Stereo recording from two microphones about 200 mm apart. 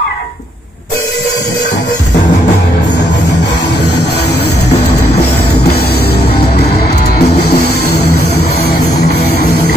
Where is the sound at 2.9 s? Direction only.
60° left (ahead or behind).